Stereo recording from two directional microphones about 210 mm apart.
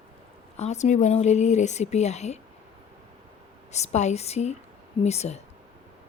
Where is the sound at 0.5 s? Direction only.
30° left (ahead or behind).